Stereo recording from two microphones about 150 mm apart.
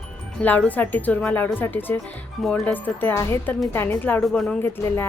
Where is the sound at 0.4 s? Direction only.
10° left (ahead or behind).